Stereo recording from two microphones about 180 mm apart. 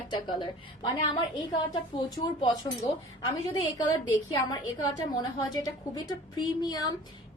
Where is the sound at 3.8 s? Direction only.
20° left (ahead or behind).